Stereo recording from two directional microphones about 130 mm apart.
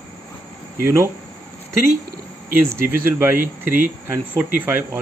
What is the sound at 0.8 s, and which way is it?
Speech, 20° right (ahead or behind).